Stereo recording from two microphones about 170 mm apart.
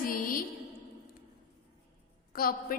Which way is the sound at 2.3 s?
60° left (ahead or behind).